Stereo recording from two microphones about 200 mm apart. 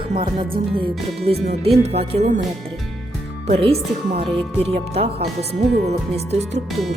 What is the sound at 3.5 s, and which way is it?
Speech, 30° right (ahead or behind).